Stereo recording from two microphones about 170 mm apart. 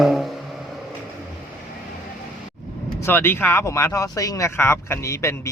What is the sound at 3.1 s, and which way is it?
Speech, 10° left (ahead or behind).